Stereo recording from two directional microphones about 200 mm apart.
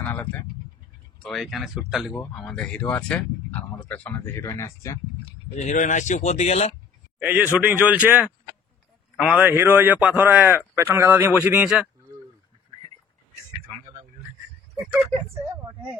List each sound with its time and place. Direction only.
0.0 s a sound: 10° left (ahead or behind)
1.2 s speech: centre (ahead or behind); by 5.3 s 20° left (ahead or behind)
5.6 s speech: 40° left (ahead or behind)
7.2 s a man's voice: 10° right (ahead or behind)